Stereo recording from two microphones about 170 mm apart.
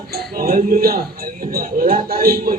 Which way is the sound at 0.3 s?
60° right (ahead or behind).